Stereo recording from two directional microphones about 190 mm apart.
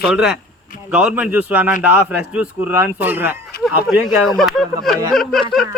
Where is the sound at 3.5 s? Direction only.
55° left (ahead or behind).